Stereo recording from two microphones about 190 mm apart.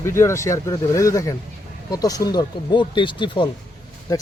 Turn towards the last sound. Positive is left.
turn(degrees=20)  # may be behind; listen again after turning